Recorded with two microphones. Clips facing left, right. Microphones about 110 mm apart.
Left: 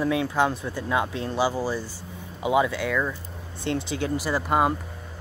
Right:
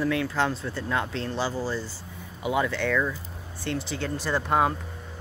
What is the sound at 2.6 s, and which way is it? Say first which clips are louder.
Speech: even; 10° left (ahead or behind).